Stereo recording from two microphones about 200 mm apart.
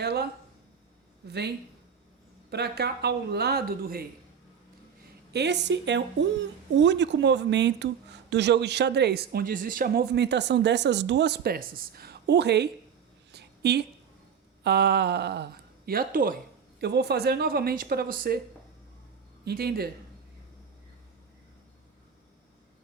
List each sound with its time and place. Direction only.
0.0 s a sound: 55° right (ahead or behind)
1.3 s speech: 55° right (ahead or behind)
5.3 s speech: 60° right (ahead or behind)
13.3 s a sound: 55° right (ahead or behind)
14.6 s speech: 55° right (ahead or behind)
16.8 s speech: 55° right (ahead or behind)
19.5 s speech: 50° right (ahead or behind)